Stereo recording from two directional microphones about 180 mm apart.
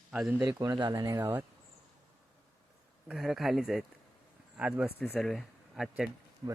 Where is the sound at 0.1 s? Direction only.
5° right (ahead or behind).